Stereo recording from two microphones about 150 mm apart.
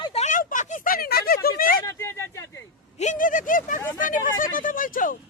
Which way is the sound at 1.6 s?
70° left (ahead or behind).